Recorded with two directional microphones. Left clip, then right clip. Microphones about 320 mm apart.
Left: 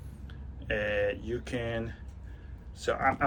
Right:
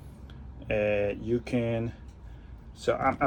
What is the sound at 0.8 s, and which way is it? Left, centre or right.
Speech, right.